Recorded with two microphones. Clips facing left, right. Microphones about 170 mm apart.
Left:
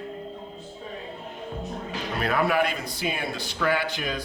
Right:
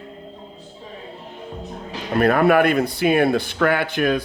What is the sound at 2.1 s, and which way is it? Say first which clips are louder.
Speech: right 9 dB; 55° right (ahead or behind).